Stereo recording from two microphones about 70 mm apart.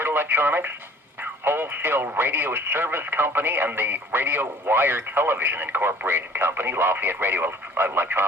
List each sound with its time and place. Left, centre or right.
0.0 s speech: right